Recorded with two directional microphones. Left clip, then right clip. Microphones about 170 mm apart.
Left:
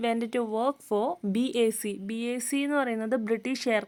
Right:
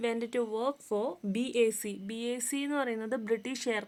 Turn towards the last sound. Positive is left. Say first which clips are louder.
# left 6 dB
turn(degrees=35)  # may be behind; listen again after turning